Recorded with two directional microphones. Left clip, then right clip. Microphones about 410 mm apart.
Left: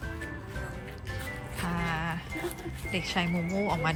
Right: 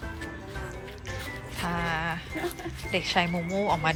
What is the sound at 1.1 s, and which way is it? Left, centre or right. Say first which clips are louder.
Music: right 1 dB; centre.